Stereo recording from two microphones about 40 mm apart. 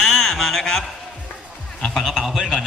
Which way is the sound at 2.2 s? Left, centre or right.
Centre.